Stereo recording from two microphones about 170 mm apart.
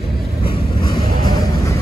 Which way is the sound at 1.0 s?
60° right (ahead or behind).